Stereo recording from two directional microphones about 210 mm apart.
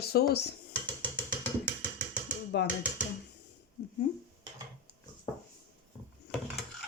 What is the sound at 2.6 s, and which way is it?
Speech, 55° left (ahead or behind).